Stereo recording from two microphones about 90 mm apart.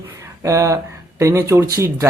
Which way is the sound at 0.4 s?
35° right (ahead or behind).